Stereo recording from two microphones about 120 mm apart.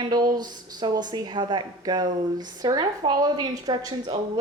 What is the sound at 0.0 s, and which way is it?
A woman's voice, 35° right (ahead or behind).